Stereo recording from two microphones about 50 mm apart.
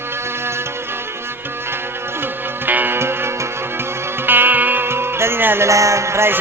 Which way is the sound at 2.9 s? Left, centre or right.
Right.